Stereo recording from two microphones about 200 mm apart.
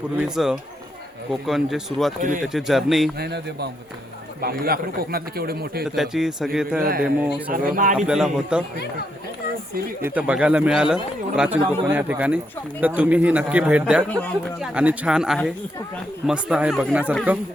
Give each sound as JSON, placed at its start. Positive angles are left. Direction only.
{"t": 0.2, "sound": "speech", "side_deg": 0}
{"t": 3.2, "sound": "a man's voice", "side_deg": -55}
{"t": 5.8, "sound": "speech", "side_deg": 0}
{"t": 6.7, "sound": "a man's voice", "side_deg": -50}
{"t": 7.0, "sound": "speech", "side_deg": -5}
{"t": 7.5, "sound": "a man's voice", "side_deg": -40}
{"t": 7.9, "sound": "speech", "side_deg": -5}
{"t": 10.0, "sound": "speech", "side_deg": -10}
{"t": 14.1, "sound": "speech", "side_deg": 5}
{"t": 14.7, "sound": "speech", "side_deg": -5}